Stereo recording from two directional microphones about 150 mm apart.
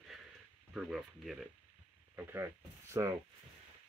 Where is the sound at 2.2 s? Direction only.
15° right (ahead or behind).